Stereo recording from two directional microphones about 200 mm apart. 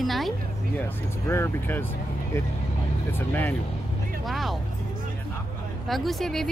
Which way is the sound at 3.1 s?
10° left (ahead or behind).